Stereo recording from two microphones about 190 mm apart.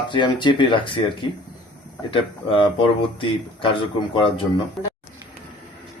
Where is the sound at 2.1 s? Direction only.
25° left (ahead or behind).